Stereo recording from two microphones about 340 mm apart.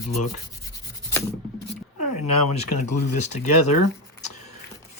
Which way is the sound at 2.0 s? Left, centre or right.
Left.